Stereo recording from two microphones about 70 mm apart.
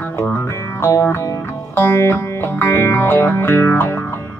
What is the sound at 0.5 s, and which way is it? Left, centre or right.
Music, left.